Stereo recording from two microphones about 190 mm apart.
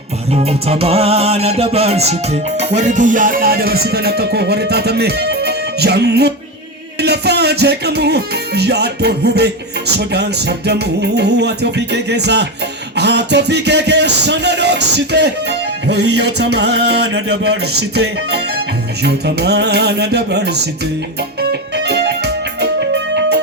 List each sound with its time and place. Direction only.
0.3 s music: 30° right (ahead or behind); by 9.5 s 60° right (ahead or behind)
10.7 s music: 60° right (ahead or behind)
21.8 s music: 60° right (ahead or behind)